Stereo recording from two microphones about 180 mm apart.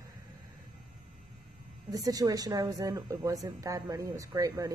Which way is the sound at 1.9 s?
20° right (ahead or behind).